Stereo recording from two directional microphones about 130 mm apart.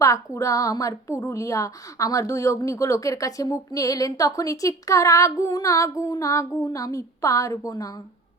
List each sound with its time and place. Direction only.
0.0 s a woman's voice: 25° left (ahead or behind)